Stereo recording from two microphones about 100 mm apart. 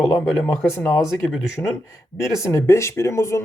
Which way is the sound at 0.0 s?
30° left (ahead or behind).